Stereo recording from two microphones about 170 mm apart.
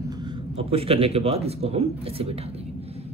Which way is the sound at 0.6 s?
35° right (ahead or behind).